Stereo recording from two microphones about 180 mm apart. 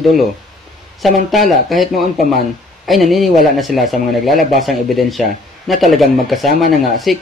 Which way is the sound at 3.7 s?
50° right (ahead or behind).